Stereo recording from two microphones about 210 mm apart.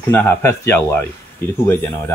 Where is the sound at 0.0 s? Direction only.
10° left (ahead or behind).